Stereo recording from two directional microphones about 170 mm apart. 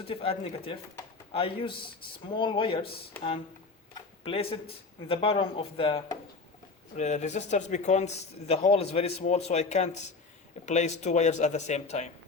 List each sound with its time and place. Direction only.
0.0 s a man's voice: 35° left (ahead or behind)
4.2 s a man's voice: 35° left (ahead or behind)
6.9 s a man's voice: 45° left (ahead or behind)